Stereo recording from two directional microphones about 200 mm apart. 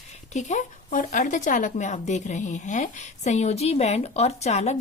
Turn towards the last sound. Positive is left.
turn(degrees=35)  # may be behind; listen again after turning